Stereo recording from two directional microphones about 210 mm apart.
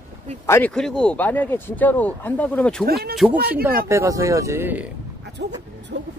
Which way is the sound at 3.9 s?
15° right (ahead or behind).